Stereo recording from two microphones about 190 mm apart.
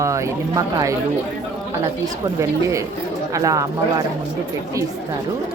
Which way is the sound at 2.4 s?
15° right (ahead or behind).